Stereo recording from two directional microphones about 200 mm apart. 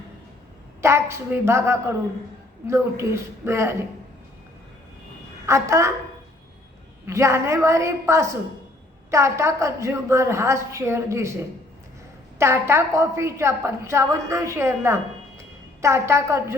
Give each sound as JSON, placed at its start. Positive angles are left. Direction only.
{"t": 0.8, "sound": "a woman's voice", "side_deg": -15}
{"t": 5.5, "sound": "a woman's voice", "side_deg": -15}
{"t": 7.1, "sound": "a woman's voice", "side_deg": -15}